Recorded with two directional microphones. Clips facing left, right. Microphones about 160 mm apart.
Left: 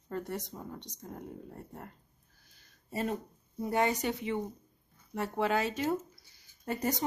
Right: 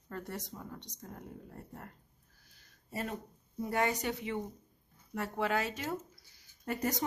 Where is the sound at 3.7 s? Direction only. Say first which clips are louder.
Left 3 dB; 25° left (ahead or behind).